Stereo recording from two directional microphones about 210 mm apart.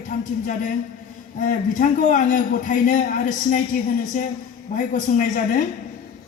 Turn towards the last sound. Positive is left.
turn(degrees=40)  # may be behind; listen again after turning